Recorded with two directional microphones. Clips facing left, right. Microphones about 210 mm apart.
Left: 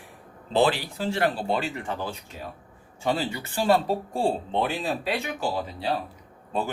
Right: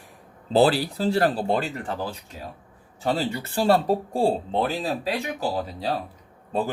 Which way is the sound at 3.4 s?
40° right (ahead or behind).